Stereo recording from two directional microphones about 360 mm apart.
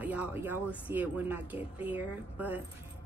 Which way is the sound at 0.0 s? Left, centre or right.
Centre.